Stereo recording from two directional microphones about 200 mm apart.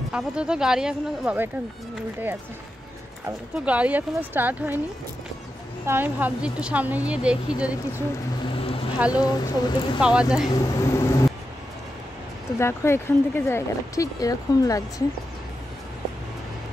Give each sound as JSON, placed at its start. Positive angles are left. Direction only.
{"t": 0.1, "sound": "speech", "side_deg": -5}
{"t": 3.5, "sound": "speech", "side_deg": -5}
{"t": 5.9, "sound": "speech", "side_deg": -10}
{"t": 8.5, "sound": "vehicle", "side_deg": 30}
{"t": 9.1, "sound": "speech", "side_deg": 20}
{"t": 9.9, "sound": "speech", "side_deg": -5}
{"t": 10.5, "sound": "speech", "side_deg": 15}
{"t": 12.5, "sound": "speech", "side_deg": 15}